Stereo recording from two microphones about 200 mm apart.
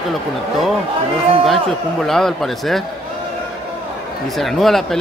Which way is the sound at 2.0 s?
Centre (ahead or behind).